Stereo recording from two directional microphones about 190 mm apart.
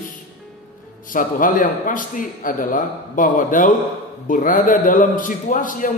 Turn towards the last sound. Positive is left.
turn(degrees=45)  # may be behind; listen again after turning